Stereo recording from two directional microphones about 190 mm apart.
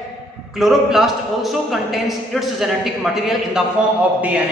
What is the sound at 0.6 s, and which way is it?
A man's voice, centre (ahead or behind).